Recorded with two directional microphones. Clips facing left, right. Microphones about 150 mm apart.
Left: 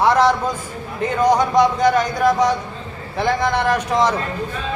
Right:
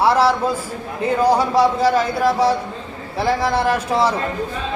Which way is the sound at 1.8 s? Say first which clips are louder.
Even; 30° right (ahead or behind).